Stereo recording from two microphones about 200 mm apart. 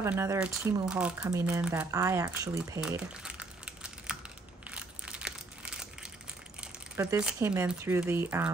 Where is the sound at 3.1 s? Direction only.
5° right (ahead or behind).